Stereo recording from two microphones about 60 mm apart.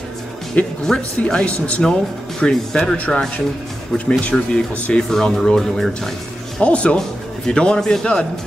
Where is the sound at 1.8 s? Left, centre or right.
Centre.